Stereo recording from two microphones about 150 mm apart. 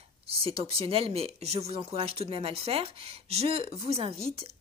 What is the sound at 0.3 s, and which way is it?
Speech, 40° right (ahead or behind).